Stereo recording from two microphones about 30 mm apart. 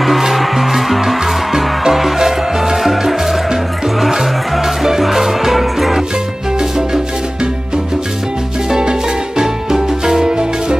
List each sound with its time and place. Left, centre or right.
0.2 s music: centre
2.1 s music: centre
5.0 s music: centre
8.6 s music: right